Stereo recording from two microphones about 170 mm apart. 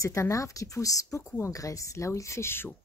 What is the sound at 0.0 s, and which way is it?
A woman's voice, 20° left (ahead or behind).